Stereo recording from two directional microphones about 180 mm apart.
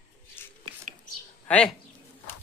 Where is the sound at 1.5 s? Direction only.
5° left (ahead or behind).